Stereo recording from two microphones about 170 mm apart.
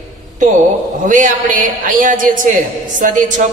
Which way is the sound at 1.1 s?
50° right (ahead or behind).